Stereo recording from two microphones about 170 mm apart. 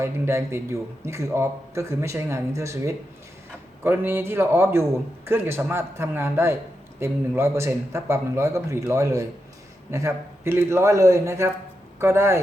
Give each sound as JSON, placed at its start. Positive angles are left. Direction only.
{"t": 0.0, "sound": "a man's voice", "side_deg": -15}